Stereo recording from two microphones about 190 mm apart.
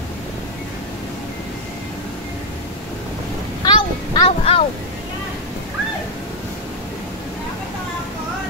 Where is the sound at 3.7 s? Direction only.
25° left (ahead or behind).